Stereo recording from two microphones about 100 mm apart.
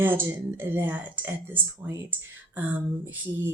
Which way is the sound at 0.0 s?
20° right (ahead or behind).